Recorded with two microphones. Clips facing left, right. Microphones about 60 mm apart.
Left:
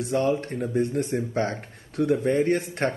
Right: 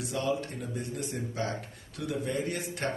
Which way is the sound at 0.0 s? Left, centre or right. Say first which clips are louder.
Left 7 dB; left.